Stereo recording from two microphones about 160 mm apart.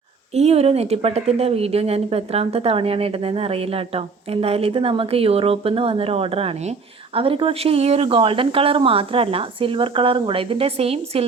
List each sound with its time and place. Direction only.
0.3 s a woman's voice: 40° right (ahead or behind)